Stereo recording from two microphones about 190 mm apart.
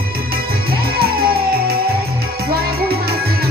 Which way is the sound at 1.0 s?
55° right (ahead or behind).